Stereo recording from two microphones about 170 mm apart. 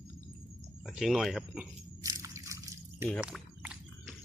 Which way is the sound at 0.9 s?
Centre (ahead or behind).